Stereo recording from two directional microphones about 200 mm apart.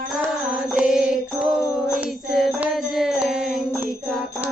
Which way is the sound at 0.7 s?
5° right (ahead or behind).